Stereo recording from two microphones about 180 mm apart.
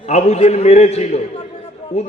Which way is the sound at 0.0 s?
40° left (ahead or behind).